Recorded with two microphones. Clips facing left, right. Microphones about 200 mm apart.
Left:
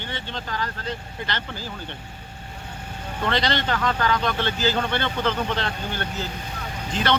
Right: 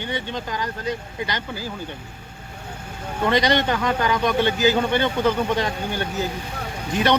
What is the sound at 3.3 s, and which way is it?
A man's voice, 15° right (ahead or behind).